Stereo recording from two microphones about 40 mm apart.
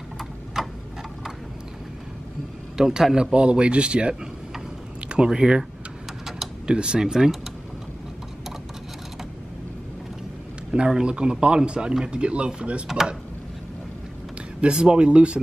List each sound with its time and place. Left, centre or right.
0.6 s tick-tock: centre
2.8 s speech: centre; by 4.1 s right
5.1 s speech: centre
6.7 s speech: right
11.0 s speech: right
12.8 s speech: centre
14.6 s speech: right